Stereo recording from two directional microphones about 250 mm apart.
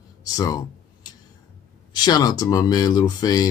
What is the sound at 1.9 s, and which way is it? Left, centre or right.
Speech, centre.